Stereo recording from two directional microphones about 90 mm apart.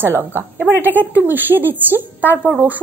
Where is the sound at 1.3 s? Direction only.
20° right (ahead or behind).